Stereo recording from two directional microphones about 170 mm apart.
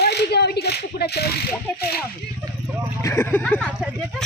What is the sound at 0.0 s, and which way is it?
Speech, 70° left (ahead or behind).